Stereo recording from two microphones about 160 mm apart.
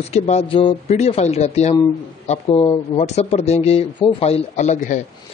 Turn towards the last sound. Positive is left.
turn(degrees=50)  # may be behind; listen again after turning